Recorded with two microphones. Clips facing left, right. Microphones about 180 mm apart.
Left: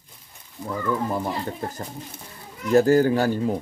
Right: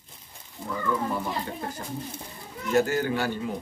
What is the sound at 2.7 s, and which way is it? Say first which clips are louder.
Speech: left 7 dB; 35° left (ahead or behind).